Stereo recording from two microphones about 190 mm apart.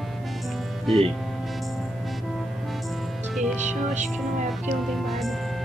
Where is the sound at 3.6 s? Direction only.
40° right (ahead or behind).